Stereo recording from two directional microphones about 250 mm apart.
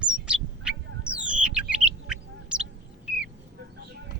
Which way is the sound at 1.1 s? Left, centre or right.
Centre.